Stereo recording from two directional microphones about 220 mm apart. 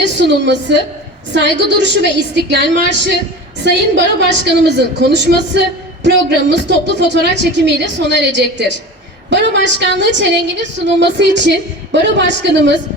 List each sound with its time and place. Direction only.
0.0 s a woman's voice: 55° right (ahead or behind)